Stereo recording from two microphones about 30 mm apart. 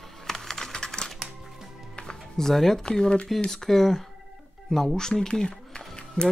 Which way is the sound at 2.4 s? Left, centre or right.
Centre.